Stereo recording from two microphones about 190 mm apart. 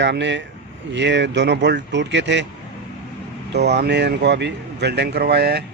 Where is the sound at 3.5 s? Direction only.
60° right (ahead or behind).